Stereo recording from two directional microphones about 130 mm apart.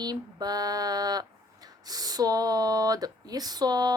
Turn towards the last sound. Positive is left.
turn(degrees=-30)  # may be behind; listen again after turning